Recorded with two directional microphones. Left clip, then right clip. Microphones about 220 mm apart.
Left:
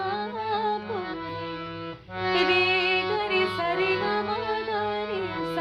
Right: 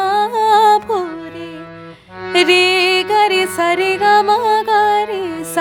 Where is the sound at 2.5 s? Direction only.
50° right (ahead or behind).